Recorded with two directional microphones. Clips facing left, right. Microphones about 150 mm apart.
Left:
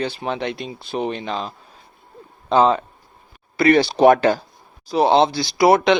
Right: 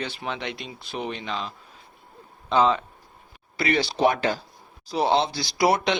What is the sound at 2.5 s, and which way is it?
Speech, 40° left (ahead or behind).